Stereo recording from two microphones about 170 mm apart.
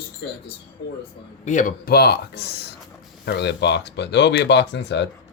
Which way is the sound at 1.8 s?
70° left (ahead or behind).